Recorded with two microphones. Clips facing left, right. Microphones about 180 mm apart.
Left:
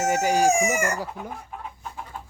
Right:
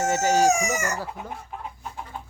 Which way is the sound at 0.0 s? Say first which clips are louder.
Even; 10° left (ahead or behind).